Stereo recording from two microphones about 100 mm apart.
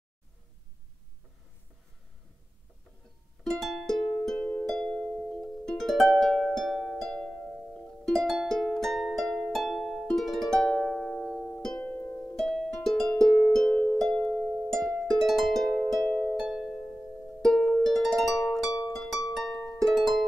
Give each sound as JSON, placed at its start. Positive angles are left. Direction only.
{"t": 3.6, "sound": "music", "side_deg": 0}
{"t": 11.8, "sound": "music", "side_deg": 20}
{"t": 12.4, "sound": "music", "side_deg": 0}
{"t": 19.3, "sound": "harp", "side_deg": 0}